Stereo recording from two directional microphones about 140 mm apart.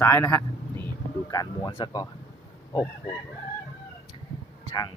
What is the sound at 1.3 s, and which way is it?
Speech, 30° left (ahead or behind).